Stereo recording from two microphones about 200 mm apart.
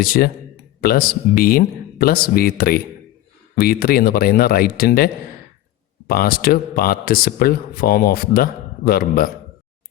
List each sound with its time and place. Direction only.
0.0 s speech: 50° left (ahead or behind)